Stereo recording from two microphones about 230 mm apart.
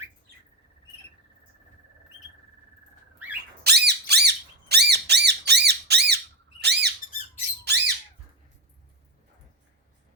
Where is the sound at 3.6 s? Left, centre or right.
Right.